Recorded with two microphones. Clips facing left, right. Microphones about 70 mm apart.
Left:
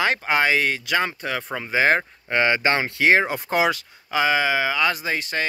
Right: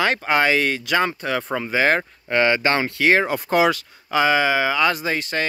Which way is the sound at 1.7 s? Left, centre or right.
Centre.